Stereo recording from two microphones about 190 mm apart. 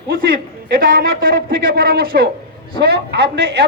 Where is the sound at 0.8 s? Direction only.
50° right (ahead or behind).